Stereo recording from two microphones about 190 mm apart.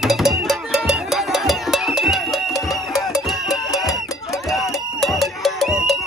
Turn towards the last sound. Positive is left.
turn(degrees=0)  # may be behind; listen again after turning